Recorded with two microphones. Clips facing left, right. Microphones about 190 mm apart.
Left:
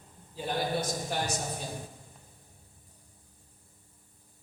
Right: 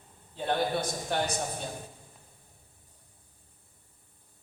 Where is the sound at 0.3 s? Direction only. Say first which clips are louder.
Right 2 dB; 60° right (ahead or behind).